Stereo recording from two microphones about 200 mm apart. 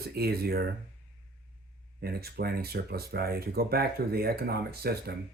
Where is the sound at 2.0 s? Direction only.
50° right (ahead or behind).